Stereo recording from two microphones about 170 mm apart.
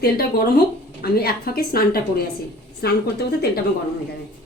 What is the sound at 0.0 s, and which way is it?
A woman's voice, 65° left (ahead or behind).